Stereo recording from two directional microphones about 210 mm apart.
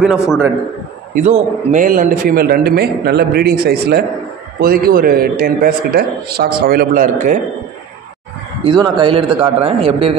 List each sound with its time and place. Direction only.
1.1 s a man's voice: 35° right (ahead or behind)
8.6 s speech: 20° right (ahead or behind)